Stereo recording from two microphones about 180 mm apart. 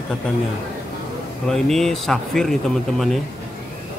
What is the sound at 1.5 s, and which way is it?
Speech, centre (ahead or behind).